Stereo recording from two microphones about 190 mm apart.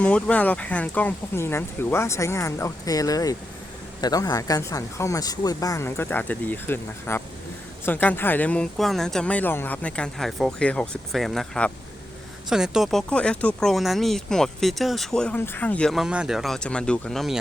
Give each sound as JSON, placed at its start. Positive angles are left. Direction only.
{"t": 0.0, "sound": "speech", "side_deg": 5}